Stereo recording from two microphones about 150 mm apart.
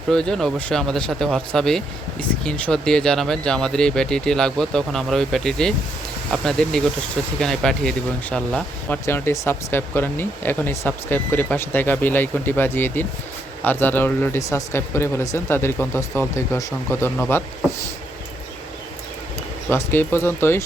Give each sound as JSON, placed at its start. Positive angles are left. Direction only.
{"t": 0.1, "sound": "speech", "side_deg": 5}
{"t": 19.7, "sound": "speech", "side_deg": 15}